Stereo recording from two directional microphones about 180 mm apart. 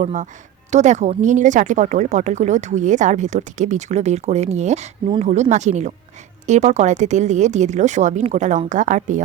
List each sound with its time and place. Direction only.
0.0 s speech: 45° right (ahead or behind)